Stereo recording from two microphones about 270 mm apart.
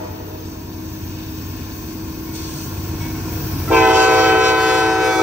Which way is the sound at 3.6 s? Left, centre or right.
Centre.